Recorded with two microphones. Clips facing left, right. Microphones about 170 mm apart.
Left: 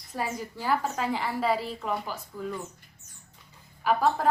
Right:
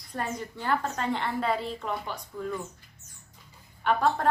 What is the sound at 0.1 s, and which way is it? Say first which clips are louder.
A woman's voice: left 1 dB; 5° left (ahead or behind).